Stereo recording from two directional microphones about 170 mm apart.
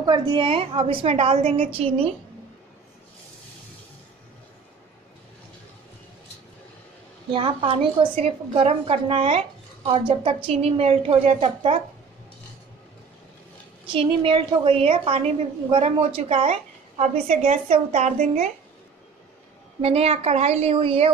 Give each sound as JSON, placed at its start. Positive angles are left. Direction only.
{"t": 0.0, "sound": "a woman's voice", "side_deg": -25}
{"t": 7.2, "sound": "a woman's voice", "side_deg": -30}
{"t": 13.9, "sound": "a woman's voice", "side_deg": -35}
{"t": 19.8, "sound": "a woman's voice", "side_deg": -35}